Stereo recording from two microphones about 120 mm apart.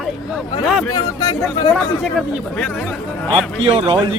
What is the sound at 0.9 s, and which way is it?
Speech, 35° left (ahead or behind).